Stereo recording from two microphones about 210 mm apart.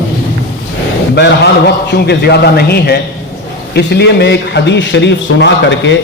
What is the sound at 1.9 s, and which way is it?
A man's voice, 50° left (ahead or behind).